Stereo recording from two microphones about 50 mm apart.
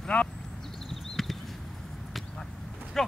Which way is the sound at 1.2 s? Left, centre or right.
Centre.